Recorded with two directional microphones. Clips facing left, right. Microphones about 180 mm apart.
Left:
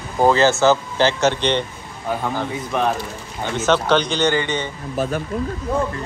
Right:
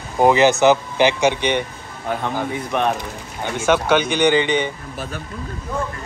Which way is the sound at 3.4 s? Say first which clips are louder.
Even; 10° right (ahead or behind).